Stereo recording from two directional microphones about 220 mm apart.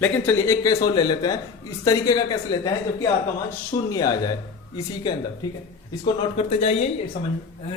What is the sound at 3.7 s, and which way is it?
A man's voice, 15° left (ahead or behind).